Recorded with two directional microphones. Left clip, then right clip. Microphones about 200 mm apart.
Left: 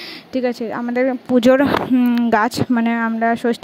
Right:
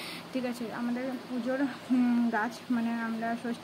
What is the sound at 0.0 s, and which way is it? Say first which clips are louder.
Speech: left 14 dB; 40° left (ahead or behind).